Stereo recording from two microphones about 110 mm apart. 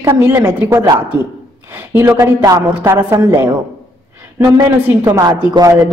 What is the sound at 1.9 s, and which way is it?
A woman's voice, 20° right (ahead or behind).